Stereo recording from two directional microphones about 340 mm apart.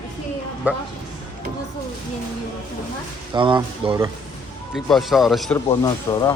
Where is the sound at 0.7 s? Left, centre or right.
Centre.